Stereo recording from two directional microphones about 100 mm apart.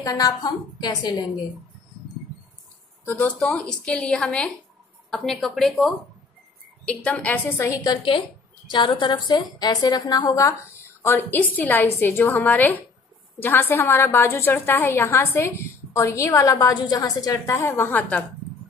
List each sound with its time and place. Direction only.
0.0 s a woman's voice: 35° left (ahead or behind)
3.1 s a woman's voice: 15° left (ahead or behind); by 8.0 s 35° left (ahead or behind)
8.6 s a woman's voice: 50° left (ahead or behind)
9.3 s a woman's voice: 40° left (ahead or behind)
11.0 s a woman's voice: 20° left (ahead or behind)
16.7 s a woman's voice: 45° left (ahead or behind); by 18.2 s 20° left (ahead or behind)